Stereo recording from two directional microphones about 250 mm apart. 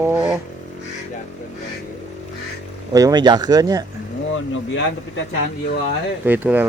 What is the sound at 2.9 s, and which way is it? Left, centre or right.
Speech, centre.